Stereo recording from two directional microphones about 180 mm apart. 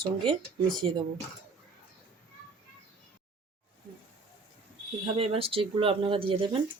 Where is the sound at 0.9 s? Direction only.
25° right (ahead or behind).